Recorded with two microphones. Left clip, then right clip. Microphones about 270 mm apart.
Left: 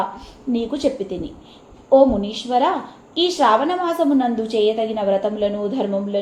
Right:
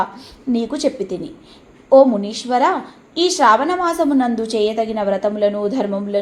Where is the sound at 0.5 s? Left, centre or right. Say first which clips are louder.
Right 1 dB; right.